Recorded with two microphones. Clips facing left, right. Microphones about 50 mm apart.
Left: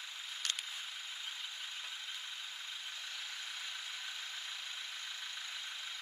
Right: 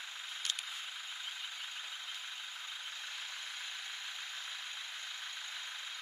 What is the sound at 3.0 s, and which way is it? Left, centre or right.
Vehicle, right.